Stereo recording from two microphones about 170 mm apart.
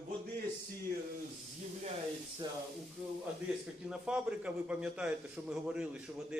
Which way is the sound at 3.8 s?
5° right (ahead or behind).